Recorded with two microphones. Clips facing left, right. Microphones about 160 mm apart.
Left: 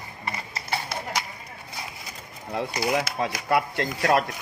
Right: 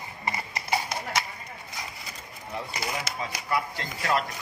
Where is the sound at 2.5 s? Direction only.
75° left (ahead or behind).